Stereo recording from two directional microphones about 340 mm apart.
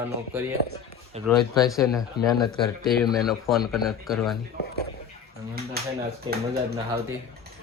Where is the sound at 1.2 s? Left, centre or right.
Centre.